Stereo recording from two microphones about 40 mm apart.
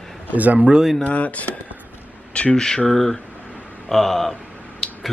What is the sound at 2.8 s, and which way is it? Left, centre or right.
Speech, centre.